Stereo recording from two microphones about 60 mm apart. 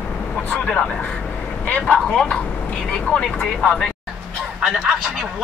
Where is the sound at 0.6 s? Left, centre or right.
Centre.